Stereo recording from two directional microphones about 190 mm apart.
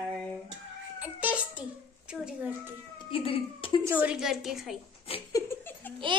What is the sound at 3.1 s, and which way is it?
Speech, 30° left (ahead or behind).